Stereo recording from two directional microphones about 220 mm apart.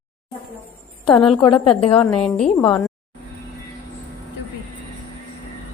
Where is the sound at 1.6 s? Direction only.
25° left (ahead or behind).